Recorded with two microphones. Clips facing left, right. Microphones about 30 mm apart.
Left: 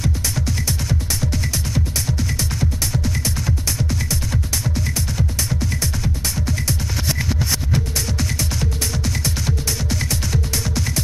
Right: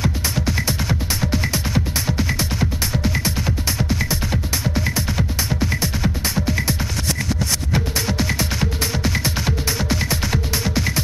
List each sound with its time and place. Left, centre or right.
0.0 s music: right
7.1 s music: centre
7.7 s music: right